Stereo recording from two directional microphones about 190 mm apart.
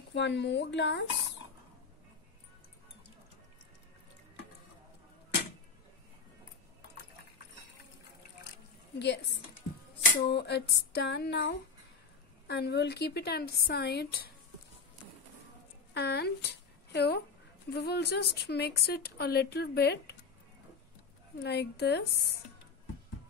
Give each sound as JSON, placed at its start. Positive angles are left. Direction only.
{"t": 0.1, "sound": "speech", "side_deg": 65}
{"t": 8.9, "sound": "speech", "side_deg": 65}
{"t": 10.2, "sound": "a woman's voice", "side_deg": 60}
{"t": 15.9, "sound": "a woman's voice", "side_deg": 60}
{"t": 21.4, "sound": "a woman's voice", "side_deg": 60}